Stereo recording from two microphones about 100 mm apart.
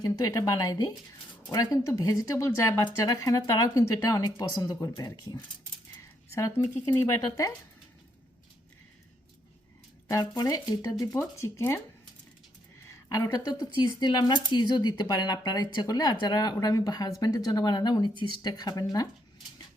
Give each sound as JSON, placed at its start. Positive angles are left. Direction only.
{"t": 0.0, "sound": "speech", "side_deg": 35}
{"t": 6.0, "sound": "speech", "side_deg": 30}
{"t": 10.1, "sound": "speech", "side_deg": 40}
{"t": 12.8, "sound": "speech", "side_deg": 30}